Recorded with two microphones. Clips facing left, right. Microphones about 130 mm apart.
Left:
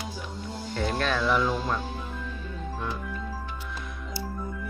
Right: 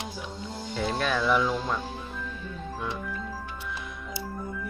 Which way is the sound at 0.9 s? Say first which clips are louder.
Right 1 dB; 10° right (ahead or behind).